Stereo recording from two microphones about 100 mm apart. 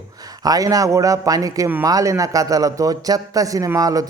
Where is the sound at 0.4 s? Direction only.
40° right (ahead or behind).